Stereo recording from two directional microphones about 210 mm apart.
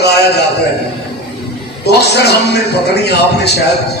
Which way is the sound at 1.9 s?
50° left (ahead or behind).